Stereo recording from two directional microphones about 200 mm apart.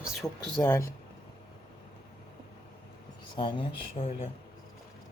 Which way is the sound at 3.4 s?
25° left (ahead or behind).